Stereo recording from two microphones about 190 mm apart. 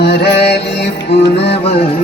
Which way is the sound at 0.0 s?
60° left (ahead or behind).